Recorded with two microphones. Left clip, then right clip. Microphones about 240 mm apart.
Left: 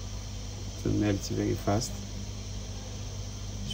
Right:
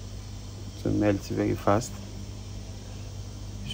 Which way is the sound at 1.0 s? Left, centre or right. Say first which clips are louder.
Right 6 dB; centre.